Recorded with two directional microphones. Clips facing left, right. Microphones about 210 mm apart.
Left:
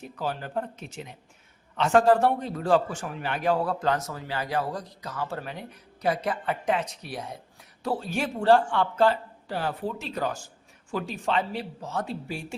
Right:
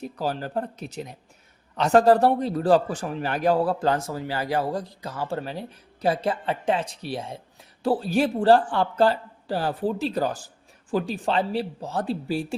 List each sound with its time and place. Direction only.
0.0 s a man's voice: 35° right (ahead or behind)